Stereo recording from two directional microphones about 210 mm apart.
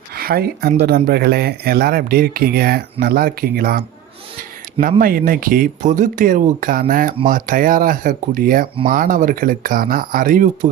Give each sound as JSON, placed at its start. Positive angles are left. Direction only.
{"t": 0.1, "sound": "speech", "side_deg": -45}